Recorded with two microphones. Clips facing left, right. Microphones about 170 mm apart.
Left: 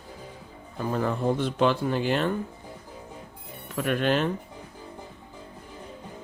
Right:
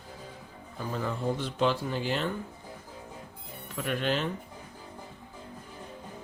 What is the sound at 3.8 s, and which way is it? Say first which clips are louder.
Speech: left 5 dB; 55° left (ahead or behind).